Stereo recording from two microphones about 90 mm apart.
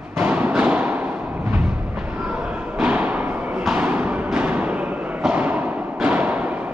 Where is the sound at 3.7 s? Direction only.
15° right (ahead or behind).